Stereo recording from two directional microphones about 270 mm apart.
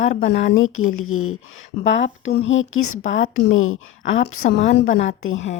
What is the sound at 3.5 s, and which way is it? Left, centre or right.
Speech, left.